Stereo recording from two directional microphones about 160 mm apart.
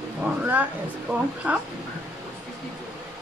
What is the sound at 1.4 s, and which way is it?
Speech, 10° right (ahead or behind).